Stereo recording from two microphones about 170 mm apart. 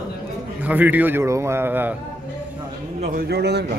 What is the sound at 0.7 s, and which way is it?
A man's voice, 10° right (ahead or behind).